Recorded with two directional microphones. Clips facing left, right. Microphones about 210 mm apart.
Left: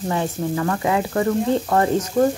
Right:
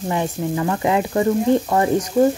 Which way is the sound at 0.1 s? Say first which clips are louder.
Right 1 dB; 15° right (ahead or behind).